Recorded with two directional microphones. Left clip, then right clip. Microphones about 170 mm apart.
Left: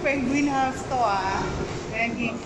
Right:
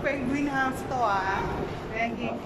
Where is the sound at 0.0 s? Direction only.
10° left (ahead or behind).